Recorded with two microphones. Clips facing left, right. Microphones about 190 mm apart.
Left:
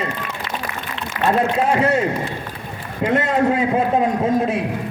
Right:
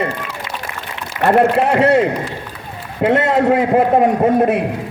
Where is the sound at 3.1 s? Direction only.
70° right (ahead or behind).